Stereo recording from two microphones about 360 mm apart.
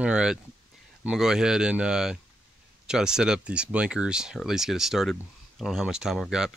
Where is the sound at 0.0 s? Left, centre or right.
Centre.